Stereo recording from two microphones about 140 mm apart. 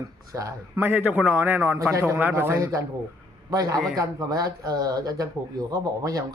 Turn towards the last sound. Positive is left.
turn(degrees=-25)  # may be behind; listen again after turning